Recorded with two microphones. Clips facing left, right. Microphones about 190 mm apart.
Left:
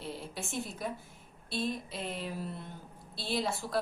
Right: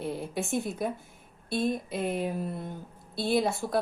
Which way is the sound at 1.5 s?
50° right (ahead or behind).